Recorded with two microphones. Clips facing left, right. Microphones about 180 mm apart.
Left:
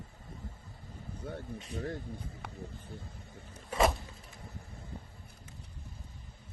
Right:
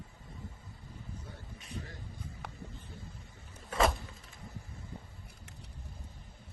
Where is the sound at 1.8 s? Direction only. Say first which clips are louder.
Left 10 dB; 55° left (ahead or behind).